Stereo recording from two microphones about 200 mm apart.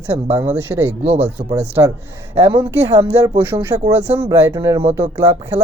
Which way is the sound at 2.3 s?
30° right (ahead or behind).